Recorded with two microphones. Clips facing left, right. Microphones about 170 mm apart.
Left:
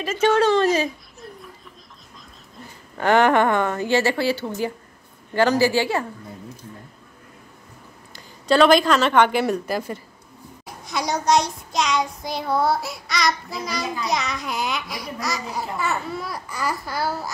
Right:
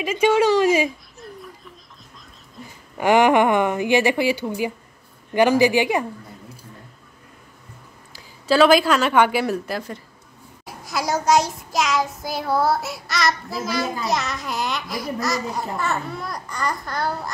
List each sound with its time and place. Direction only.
0.0 s speech: 10° right (ahead or behind)
3.0 s a woman's voice: 15° right (ahead or behind)
8.1 s a woman's voice: 5° right (ahead or behind)
10.6 s child singing: 5° right (ahead or behind)